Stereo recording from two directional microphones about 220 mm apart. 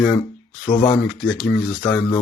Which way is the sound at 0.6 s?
20° left (ahead or behind).